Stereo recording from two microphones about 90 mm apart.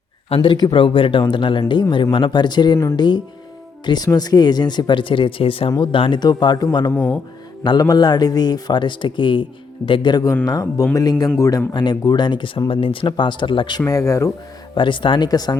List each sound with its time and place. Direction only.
0.3 s speech: 90° left
0.7 s speech: 75° left (ahead or behind)
1.2 s speech: 65° left (ahead or behind); by 5.7 s 90° left
5.8 s speech: 70° left (ahead or behind)
6.1 s speech: 50° left (ahead or behind)
6.9 s speech: 15° left (ahead or behind)
7.8 s speech: 45° left (ahead or behind)
10.4 s speech: 45° left (ahead or behind)
11.7 s speech: 55° left (ahead or behind)
13.8 s speech: 35° left (ahead or behind)
14.8 s speech: 65° left (ahead or behind); by 15.5 s 50° left (ahead or behind)